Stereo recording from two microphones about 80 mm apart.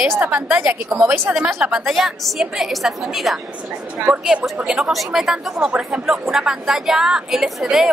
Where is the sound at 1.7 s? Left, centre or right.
Centre.